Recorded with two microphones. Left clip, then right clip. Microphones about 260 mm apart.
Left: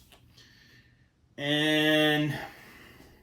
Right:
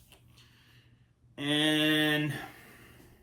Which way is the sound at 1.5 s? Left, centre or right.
Right.